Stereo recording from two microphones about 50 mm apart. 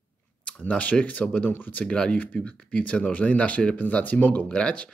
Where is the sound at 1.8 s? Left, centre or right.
Left.